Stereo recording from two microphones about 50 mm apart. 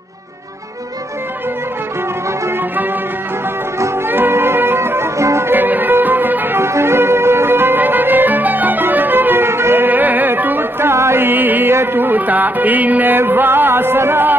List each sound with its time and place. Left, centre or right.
4.1 s music: right
5.1 s music: right
5.5 s music: right
6.6 s music: right
9.8 s music: right
11.2 s music: right
11.7 s music: right
13.2 s music: right